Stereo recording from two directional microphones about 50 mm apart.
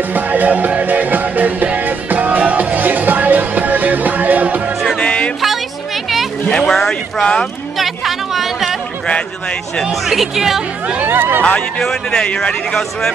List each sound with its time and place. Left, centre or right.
0.1 s music: right
4.9 s music: left
6.5 s a sound: centre
7.7 s a sound: centre
9.8 s speech: centre
11.1 s speech: right
11.8 s speech: centre